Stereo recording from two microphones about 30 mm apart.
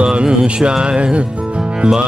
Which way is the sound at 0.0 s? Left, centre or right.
Right.